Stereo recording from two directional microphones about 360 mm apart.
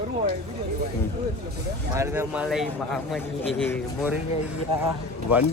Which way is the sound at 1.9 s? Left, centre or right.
Centre.